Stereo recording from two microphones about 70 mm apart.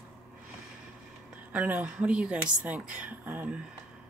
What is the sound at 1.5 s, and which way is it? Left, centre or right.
Speech, right.